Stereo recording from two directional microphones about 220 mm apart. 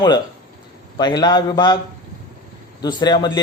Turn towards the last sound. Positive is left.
turn(degrees=20)  # may be behind; listen again after turning